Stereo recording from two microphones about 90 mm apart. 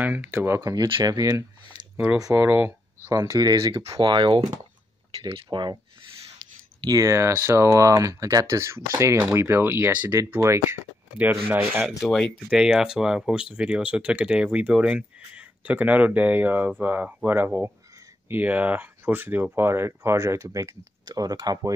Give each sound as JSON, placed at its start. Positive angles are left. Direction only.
{"t": 0.0, "sound": "speech", "side_deg": -15}
{"t": 0.5, "sound": "speech", "side_deg": -35}
{"t": 2.0, "sound": "speech", "side_deg": -10}
{"t": 2.3, "sound": "speech", "side_deg": -25}
{"t": 4.0, "sound": "speech", "side_deg": -65}
{"t": 6.8, "sound": "speech", "side_deg": -40}
{"t": 12.0, "sound": "speech", "side_deg": 0}